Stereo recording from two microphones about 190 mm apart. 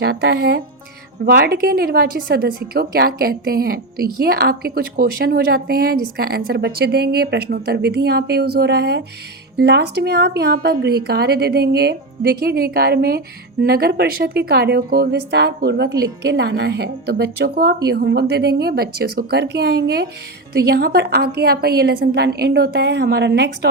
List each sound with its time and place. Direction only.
0.0 s a woman's voice: 55° right (ahead or behind)